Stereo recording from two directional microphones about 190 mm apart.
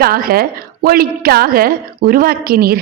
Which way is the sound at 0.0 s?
50° right (ahead or behind).